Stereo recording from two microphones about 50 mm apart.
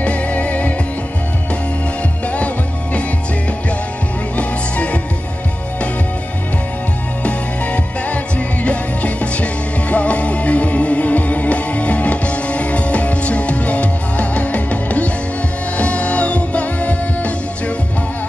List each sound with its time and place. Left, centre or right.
0.0 s music: left
2.3 s music: left
4.4 s music: left
7.2 s music: left